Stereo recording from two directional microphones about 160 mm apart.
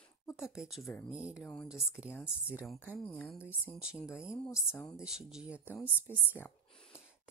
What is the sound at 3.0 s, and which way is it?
Speech, 10° left (ahead or behind).